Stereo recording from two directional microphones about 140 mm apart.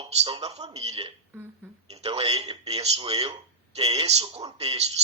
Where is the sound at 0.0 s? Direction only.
40° right (ahead or behind).